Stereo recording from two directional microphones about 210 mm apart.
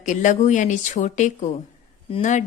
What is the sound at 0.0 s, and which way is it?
A woman's voice, 35° left (ahead or behind).